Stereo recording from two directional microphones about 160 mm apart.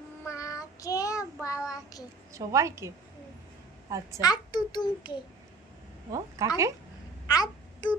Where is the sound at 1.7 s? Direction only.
20° left (ahead or behind).